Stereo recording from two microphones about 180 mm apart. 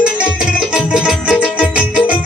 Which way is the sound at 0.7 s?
5° right (ahead or behind).